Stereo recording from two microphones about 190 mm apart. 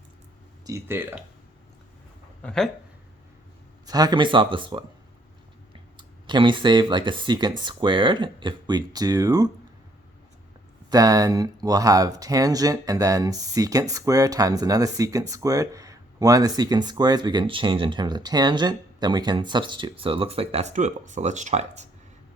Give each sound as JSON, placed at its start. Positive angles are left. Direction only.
{"t": 0.6, "sound": "speech", "side_deg": -15}
{"t": 2.4, "sound": "speech", "side_deg": 5}
{"t": 3.8, "sound": "speech", "side_deg": -20}
{"t": 6.0, "sound": "speech", "side_deg": -25}
{"t": 10.8, "sound": "speech", "side_deg": -20}